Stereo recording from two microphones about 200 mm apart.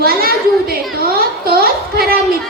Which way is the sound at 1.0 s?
50° right (ahead or behind).